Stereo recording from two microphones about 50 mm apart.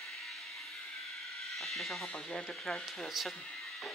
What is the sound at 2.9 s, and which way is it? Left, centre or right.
Speech, centre.